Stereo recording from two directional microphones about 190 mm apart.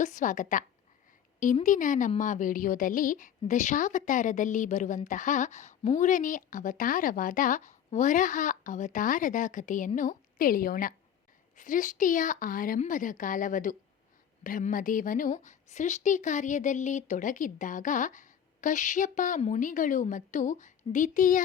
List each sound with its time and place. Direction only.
0.0 s a woman's voice: 40° left (ahead or behind)
1.6 s a woman's voice: 45° left (ahead or behind)